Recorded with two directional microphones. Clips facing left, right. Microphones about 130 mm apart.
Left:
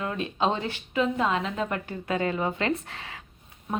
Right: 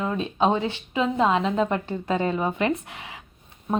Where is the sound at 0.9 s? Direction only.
30° right (ahead or behind).